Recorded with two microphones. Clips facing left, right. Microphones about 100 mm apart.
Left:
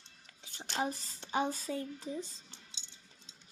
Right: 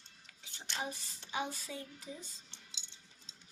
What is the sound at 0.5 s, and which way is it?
Speech, 40° left (ahead or behind).